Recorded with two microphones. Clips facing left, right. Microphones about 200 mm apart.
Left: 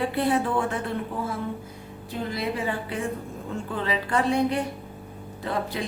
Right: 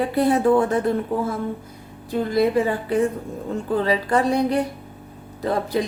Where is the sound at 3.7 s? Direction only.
40° right (ahead or behind).